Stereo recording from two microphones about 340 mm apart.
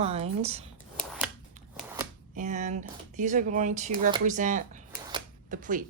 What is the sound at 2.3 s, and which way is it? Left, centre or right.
Speech, right.